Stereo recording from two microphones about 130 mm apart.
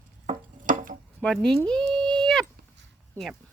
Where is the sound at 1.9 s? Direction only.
5° left (ahead or behind).